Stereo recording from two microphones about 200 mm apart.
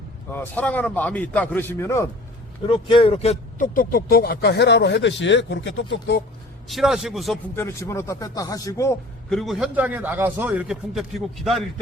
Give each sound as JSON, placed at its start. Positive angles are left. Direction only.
{"t": 0.3, "sound": "a man's voice", "side_deg": 5}
{"t": 2.6, "sound": "speech", "side_deg": 25}
{"t": 6.7, "sound": "speech", "side_deg": 0}
{"t": 7.5, "sound": "a man's voice", "side_deg": 10}
{"t": 9.3, "sound": "a man's voice", "side_deg": 0}